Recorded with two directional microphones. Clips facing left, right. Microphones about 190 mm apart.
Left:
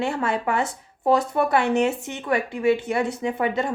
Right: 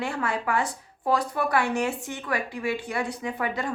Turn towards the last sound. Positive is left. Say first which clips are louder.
# left 5 dB
turn(degrees=25)  # may be behind; listen again after turning